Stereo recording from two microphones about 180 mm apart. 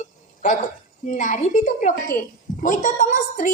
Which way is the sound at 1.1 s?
45° left (ahead or behind).